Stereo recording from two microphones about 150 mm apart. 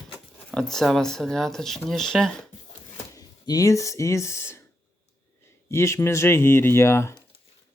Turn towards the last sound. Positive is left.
turn(degrees=20)  # may be behind; listen again after turning